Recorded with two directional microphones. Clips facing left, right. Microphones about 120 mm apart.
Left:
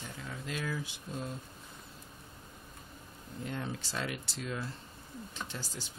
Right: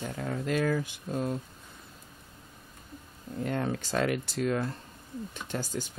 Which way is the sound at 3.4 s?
60° right (ahead or behind).